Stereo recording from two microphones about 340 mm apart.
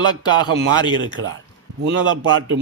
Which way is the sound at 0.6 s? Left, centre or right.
Right.